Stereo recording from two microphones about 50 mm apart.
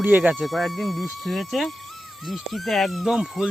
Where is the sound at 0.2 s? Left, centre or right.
Right.